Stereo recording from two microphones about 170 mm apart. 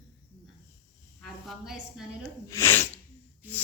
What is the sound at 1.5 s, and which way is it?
Speech, centre (ahead or behind).